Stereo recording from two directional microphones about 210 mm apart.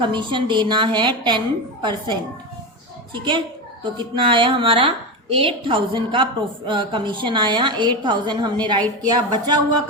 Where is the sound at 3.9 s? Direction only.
20° right (ahead or behind).